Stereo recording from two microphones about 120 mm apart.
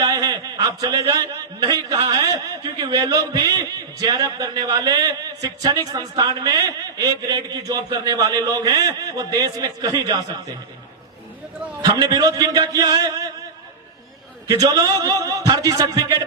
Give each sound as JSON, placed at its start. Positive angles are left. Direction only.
{"t": 0.0, "sound": "a man's voice", "side_deg": -35}
{"t": 11.8, "sound": "speech", "side_deg": -35}
{"t": 14.6, "sound": "a man's voice", "side_deg": -30}